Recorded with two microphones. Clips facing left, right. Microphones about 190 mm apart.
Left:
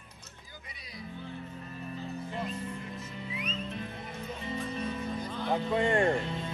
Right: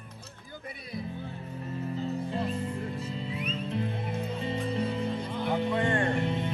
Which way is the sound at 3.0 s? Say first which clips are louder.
Right 5 dB; 30° right (ahead or behind).